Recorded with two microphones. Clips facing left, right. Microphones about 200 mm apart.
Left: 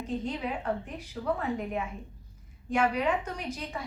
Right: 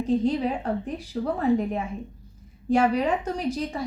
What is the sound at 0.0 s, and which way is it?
A woman's voice, 35° right (ahead or behind).